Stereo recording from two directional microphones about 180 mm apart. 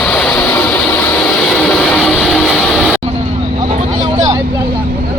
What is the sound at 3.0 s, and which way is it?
Vehicle, 30° right (ahead or behind).